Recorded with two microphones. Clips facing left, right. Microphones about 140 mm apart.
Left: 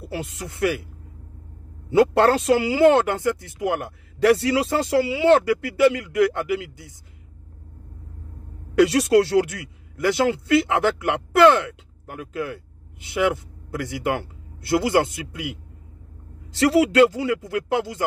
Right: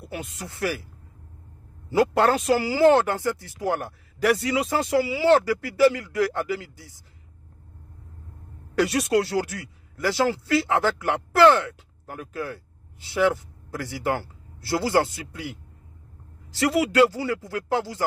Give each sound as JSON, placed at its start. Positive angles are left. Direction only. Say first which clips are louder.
{"t": 0.0, "sound": "speech", "louder": "left 4 dB", "side_deg": 30}
{"t": 1.9, "sound": "speech", "louder": "left 3 dB", "side_deg": 25}
{"t": 8.8, "sound": "a man's voice", "louder": "left 5 dB", "side_deg": 30}
{"t": 16.6, "sound": "speech", "louder": "left 4 dB", "side_deg": 30}